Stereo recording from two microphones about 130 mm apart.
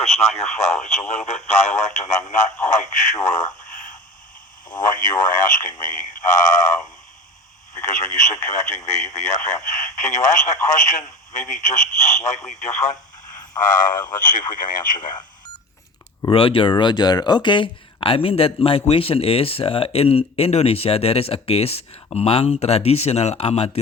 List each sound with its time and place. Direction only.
0.2 s speech: 55° left (ahead or behind)
4.8 s speech: 90° left; by 6.7 s 75° left (ahead or behind)
8.1 s speech: 75° left (ahead or behind)
13.6 s speech: 90° left
14.9 s speech: 35° left (ahead or behind)
16.3 s speech: 45° left (ahead or behind)